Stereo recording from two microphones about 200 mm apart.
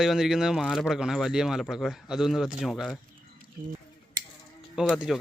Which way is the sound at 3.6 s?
45° right (ahead or behind).